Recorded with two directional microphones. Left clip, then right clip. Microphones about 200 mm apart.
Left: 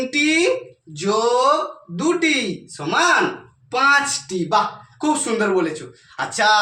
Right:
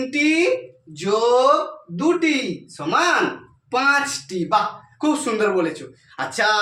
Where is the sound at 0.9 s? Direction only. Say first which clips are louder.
Right 1 dB; 20° right (ahead or behind).